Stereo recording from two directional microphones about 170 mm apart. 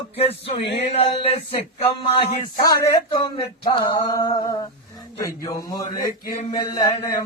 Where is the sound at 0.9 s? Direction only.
35° left (ahead or behind).